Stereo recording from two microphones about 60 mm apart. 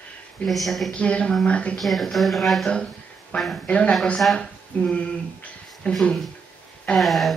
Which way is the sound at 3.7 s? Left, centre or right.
Centre.